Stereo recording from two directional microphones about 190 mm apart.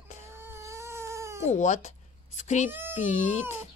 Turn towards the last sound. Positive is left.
turn(degrees=40)  # may be behind; listen again after turning